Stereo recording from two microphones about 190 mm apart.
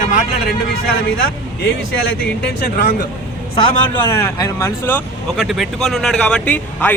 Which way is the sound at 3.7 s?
20° left (ahead or behind).